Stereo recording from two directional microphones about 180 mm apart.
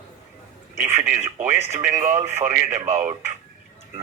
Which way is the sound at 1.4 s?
15° right (ahead or behind).